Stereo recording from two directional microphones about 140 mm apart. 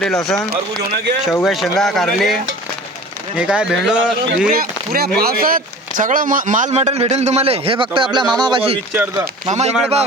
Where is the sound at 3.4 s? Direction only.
5° right (ahead or behind).